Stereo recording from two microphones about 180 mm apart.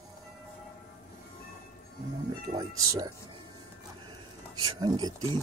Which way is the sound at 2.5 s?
20° right (ahead or behind).